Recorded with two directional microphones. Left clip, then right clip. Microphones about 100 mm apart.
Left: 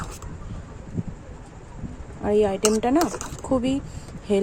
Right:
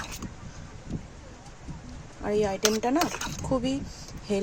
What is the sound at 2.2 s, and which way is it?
Speech, centre (ahead or behind).